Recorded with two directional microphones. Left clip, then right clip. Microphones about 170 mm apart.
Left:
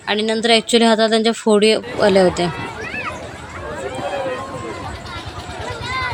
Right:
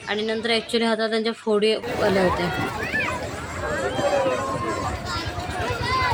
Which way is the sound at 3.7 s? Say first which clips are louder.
Right 2 dB; 5° left (ahead or behind).